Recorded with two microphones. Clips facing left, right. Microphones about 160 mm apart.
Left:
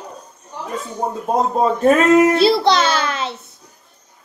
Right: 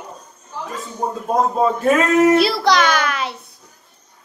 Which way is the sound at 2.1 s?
25° left (ahead or behind).